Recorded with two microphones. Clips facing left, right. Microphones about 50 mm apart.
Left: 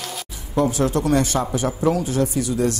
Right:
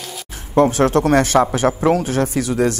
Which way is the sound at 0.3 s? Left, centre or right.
Right.